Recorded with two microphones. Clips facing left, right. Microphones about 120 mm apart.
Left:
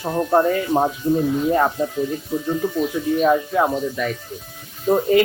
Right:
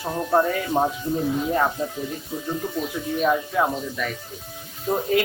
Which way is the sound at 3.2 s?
10° left (ahead or behind).